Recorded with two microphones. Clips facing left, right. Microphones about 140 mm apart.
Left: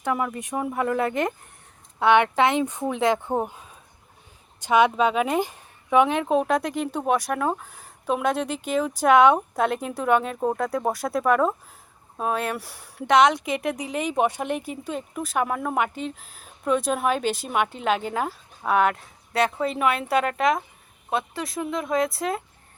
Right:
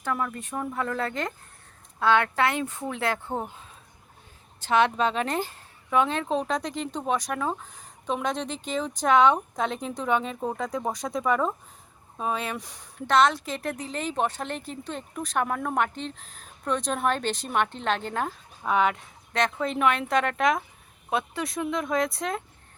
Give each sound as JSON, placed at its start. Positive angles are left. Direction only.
{"t": 0.0, "sound": "speech", "side_deg": 15}
{"t": 4.6, "sound": "speech", "side_deg": 10}